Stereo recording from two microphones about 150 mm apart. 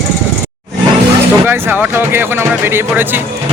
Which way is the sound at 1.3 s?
15° right (ahead or behind).